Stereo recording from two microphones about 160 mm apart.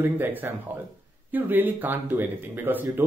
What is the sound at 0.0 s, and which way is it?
Speech, 10° right (ahead or behind).